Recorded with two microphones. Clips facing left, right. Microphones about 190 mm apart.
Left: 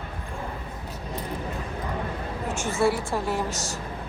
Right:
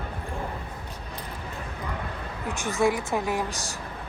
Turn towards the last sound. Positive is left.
turn(degrees=-15)  # may be behind; listen again after turning